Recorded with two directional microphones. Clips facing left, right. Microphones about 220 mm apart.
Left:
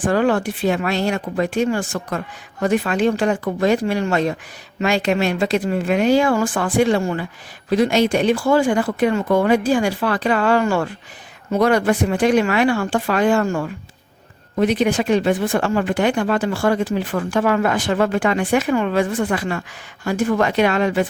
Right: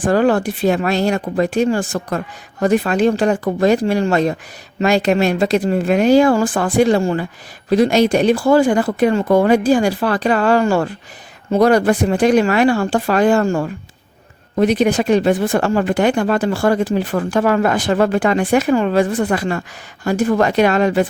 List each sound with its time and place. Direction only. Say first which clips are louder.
0.0 s speech: right 3 dB; 40° right (ahead or behind)